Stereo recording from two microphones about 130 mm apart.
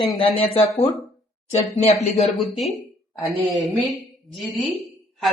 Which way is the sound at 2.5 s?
Centre (ahead or behind).